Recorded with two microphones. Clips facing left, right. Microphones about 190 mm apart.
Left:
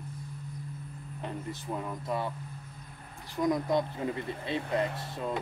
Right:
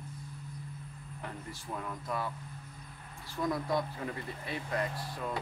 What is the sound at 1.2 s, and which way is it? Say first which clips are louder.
Speech: left 6 dB; 20° left (ahead or behind).